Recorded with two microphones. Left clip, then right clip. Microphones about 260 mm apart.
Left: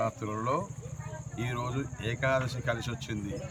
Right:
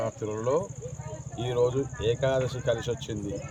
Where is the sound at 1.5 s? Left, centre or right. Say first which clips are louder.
Right 13 dB; left.